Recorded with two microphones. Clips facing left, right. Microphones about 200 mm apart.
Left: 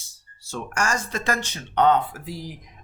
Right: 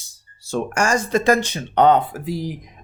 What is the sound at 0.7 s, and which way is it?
Speech, 15° right (ahead or behind).